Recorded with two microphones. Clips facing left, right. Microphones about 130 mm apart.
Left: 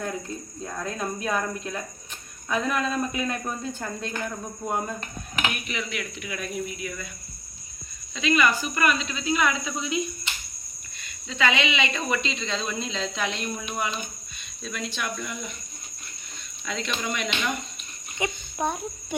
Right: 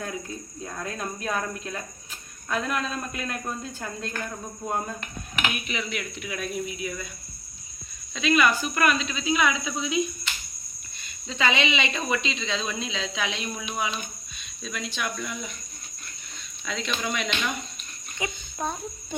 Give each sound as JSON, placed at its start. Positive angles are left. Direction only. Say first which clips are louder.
{"t": 0.6, "sound": "speech", "louder": "left 2 dB", "side_deg": 0}
{"t": 5.5, "sound": "speech", "louder": "right 2 dB", "side_deg": -5}
{"t": 6.2, "sound": "speech", "louder": "right 2 dB", "side_deg": -20}
{"t": 8.1, "sound": "speech", "louder": "right 1 dB", "side_deg": -5}
{"t": 11.3, "sound": "speech", "louder": "even", "side_deg": -25}
{"t": 12.4, "sound": "speech", "louder": "even", "side_deg": -5}
{"t": 16.6, "sound": "speech", "louder": "even", "side_deg": 0}
{"t": 18.2, "sound": "speech", "louder": "left 3 dB", "side_deg": 15}